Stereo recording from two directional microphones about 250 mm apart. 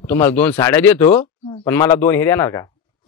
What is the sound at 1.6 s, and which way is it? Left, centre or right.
Speech, centre.